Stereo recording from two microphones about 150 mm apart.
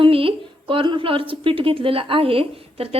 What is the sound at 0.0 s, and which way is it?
A woman's voice, 40° right (ahead or behind).